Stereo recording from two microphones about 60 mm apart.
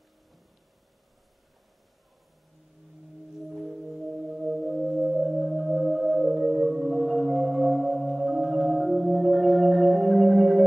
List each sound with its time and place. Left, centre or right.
3.4 s singing bowl: centre